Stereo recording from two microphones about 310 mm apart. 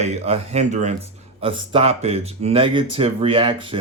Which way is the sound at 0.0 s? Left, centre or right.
Centre.